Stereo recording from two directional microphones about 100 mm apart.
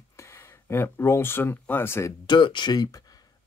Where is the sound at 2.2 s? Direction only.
55° left (ahead or behind).